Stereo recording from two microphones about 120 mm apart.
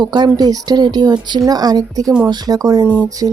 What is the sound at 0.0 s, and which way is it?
A woman's voice, 35° right (ahead or behind).